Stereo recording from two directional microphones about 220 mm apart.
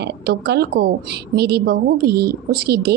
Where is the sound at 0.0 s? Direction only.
50° right (ahead or behind).